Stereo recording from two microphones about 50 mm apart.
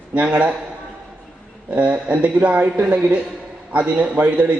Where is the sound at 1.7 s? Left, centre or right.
Right.